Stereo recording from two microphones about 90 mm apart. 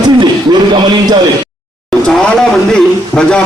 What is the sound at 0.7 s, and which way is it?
Speech, 50° right (ahead or behind).